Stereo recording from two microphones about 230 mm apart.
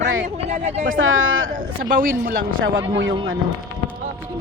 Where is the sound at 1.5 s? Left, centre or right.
Right.